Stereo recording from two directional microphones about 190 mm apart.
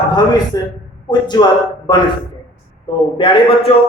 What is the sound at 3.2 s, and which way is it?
Speech, 25° left (ahead or behind).